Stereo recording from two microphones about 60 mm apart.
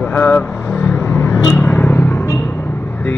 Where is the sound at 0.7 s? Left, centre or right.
Left.